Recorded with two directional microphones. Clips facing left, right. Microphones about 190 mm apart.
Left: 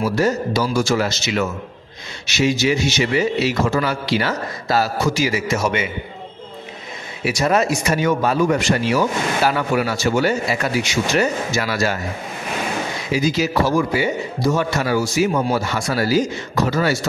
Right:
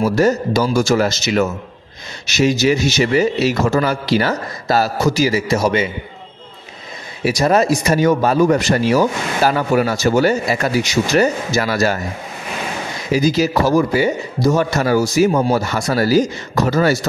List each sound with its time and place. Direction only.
0.0 s a man's voice: 45° right (ahead or behind)
7.2 s a man's voice: 40° right (ahead or behind)
13.1 s a man's voice: 40° right (ahead or behind)